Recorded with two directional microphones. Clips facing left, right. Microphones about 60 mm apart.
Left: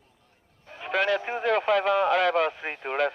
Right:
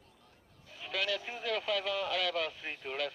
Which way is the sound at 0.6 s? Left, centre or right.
Left.